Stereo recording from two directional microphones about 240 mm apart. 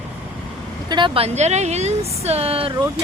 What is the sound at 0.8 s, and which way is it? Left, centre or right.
Speech, centre.